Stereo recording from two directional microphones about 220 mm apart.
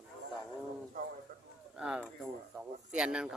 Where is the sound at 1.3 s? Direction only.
40° right (ahead or behind).